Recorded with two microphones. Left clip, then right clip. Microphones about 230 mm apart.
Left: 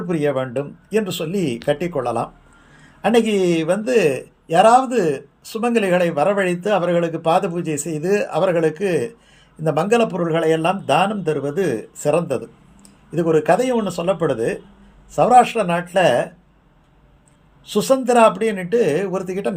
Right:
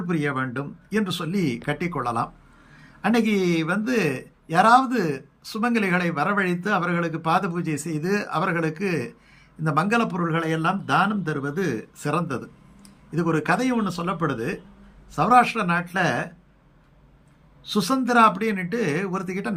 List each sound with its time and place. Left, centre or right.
0.1 s a man's voice: centre
17.7 s a man's voice: centre